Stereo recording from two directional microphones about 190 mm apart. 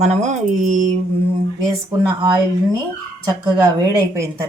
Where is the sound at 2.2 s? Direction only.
20° right (ahead or behind).